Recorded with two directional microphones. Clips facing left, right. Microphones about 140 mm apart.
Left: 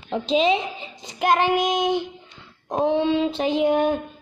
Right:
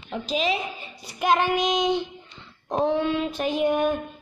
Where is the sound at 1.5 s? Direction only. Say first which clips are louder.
Left 2 dB; 50° left (ahead or behind).